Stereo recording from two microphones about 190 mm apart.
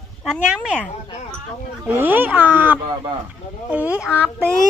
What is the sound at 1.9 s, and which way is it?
Speech, 10° right (ahead or behind).